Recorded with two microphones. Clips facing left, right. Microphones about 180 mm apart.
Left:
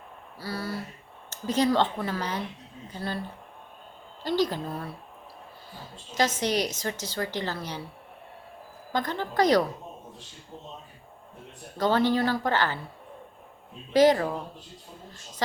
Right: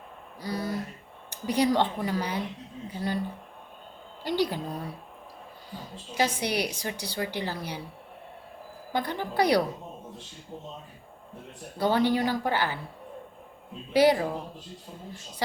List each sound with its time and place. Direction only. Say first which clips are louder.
0.3 s a sound: right 2 dB; 15° right (ahead or behind)
1.3 s a woman's voice: even; 15° right (ahead or behind)
4.2 s a woman's voice: left 1 dB; 15° right (ahead or behind)
8.9 s a woman's voice: left 1 dB; 10° right (ahead or behind)
11.8 s a woman's voice: left 1 dB; 15° right (ahead or behind)
13.9 s a woman's voice: left 1 dB; 10° right (ahead or behind)